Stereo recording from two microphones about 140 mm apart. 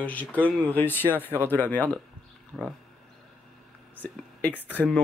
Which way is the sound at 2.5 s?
5° right (ahead or behind).